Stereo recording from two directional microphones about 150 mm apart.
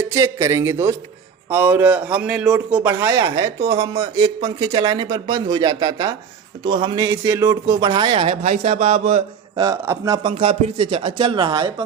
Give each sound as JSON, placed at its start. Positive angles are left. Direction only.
{"t": 0.0, "sound": "a man's voice", "side_deg": -20}
{"t": 4.4, "sound": "speech", "side_deg": -35}
{"t": 9.6, "sound": "speech", "side_deg": -20}
{"t": 10.2, "sound": "speech", "side_deg": -40}